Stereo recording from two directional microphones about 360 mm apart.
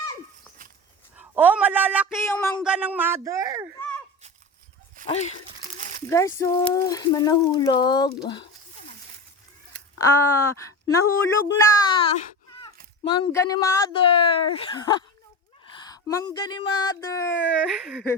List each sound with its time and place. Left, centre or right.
1.1 s speech: centre
3.8 s a sound: centre
5.0 s speech: centre
6.1 s speech: centre
10.0 s speech: centre